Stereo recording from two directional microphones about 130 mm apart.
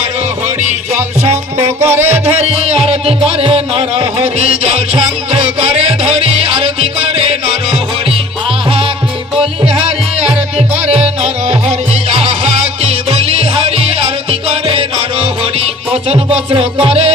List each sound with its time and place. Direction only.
1.5 s music: 15° right (ahead or behind)
2.4 s music: 50° right (ahead or behind)
5.3 s music: 50° right (ahead or behind)
10.2 s music: 10° right (ahead or behind)
10.9 s music: 55° right (ahead or behind)